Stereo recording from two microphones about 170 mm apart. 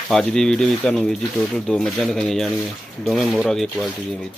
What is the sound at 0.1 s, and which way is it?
Speech, 5° left (ahead or behind).